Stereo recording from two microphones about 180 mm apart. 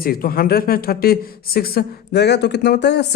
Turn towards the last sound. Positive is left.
turn(degrees=70)  # may be behind; listen again after turning